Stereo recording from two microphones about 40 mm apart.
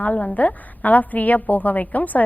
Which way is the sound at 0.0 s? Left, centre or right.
Left.